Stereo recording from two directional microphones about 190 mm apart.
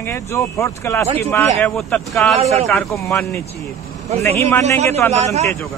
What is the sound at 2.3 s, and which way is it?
Speech, 35° right (ahead or behind).